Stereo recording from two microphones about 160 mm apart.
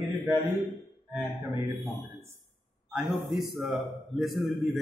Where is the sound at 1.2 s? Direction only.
15° right (ahead or behind).